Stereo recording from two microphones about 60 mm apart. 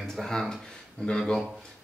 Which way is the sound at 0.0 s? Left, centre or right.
Centre.